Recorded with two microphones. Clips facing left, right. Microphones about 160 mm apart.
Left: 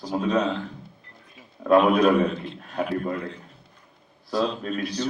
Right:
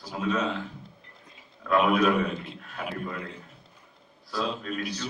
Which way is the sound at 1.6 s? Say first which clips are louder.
Left 9 dB; 30° left (ahead or behind).